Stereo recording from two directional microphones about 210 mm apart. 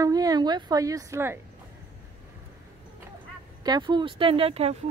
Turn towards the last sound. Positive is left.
turn(degrees=-30)  # may be behind; listen again after turning